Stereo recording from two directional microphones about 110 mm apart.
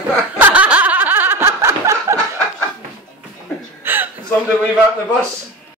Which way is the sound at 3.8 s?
20° right (ahead or behind).